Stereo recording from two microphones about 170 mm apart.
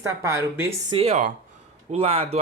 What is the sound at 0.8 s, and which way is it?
Speech, 35° right (ahead or behind).